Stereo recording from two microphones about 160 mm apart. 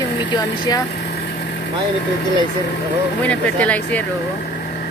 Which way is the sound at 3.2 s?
10° left (ahead or behind).